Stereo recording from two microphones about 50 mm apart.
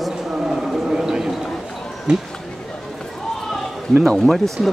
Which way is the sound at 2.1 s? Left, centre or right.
Centre.